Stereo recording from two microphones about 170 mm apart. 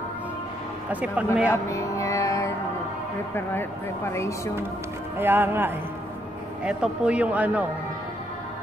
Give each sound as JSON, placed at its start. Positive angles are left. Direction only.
{"t": 0.8, "sound": "speech", "side_deg": -10}
{"t": 1.7, "sound": "music", "side_deg": 20}
{"t": 3.3, "sound": "speech", "side_deg": 15}
{"t": 5.1, "sound": "speech", "side_deg": -15}